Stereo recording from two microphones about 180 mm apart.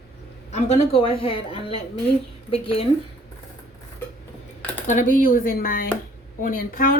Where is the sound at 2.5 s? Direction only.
35° left (ahead or behind).